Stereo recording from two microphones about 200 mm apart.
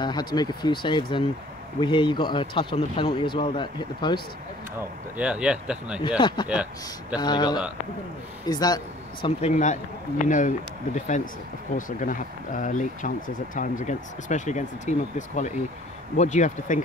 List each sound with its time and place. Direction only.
0.0 s speech: 20° left (ahead or behind)
5.1 s speech: 5° right (ahead or behind)
5.9 s speech: 25° left (ahead or behind)
6.5 s speech: 5° right (ahead or behind)
7.2 s speech: 20° left (ahead or behind)
9.4 s speech: 35° left (ahead or behind)